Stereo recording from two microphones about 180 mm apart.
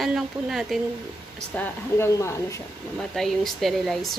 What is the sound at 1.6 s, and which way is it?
Speech, 15° left (ahead or behind).